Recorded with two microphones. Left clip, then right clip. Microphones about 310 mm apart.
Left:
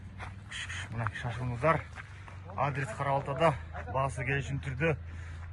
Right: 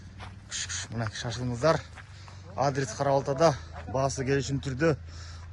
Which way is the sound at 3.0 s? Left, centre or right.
Right.